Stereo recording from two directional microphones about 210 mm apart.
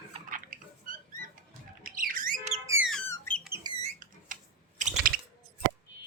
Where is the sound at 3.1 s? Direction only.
5° left (ahead or behind).